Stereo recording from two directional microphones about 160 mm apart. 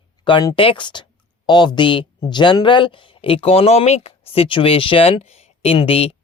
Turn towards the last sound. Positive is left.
turn(degrees=35)  # may be behind; listen again after turning